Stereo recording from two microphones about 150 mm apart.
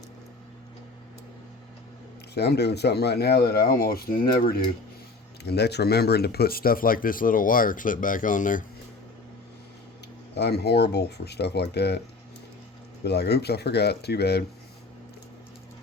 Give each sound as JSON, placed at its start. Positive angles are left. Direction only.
{"t": 2.3, "sound": "speech", "side_deg": 90}
{"t": 10.3, "sound": "speech", "side_deg": 90}
{"t": 13.1, "sound": "speech", "side_deg": 90}